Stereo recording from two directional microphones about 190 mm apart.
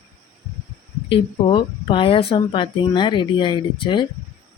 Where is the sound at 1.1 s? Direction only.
30° left (ahead or behind).